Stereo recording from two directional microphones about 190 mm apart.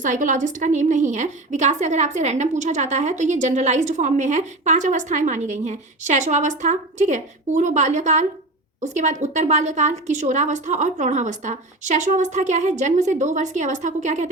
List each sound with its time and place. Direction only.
0.0 s a woman's voice: 40° right (ahead or behind)